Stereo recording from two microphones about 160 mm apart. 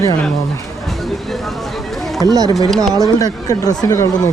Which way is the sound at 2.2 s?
25° right (ahead or behind).